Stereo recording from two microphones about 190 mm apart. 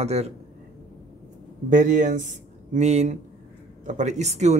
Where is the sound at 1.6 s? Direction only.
40° right (ahead or behind).